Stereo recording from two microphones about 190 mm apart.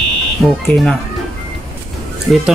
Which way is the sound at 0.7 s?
Centre (ahead or behind).